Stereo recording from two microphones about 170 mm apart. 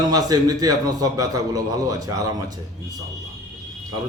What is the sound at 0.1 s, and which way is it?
A man's voice, 20° right (ahead or behind).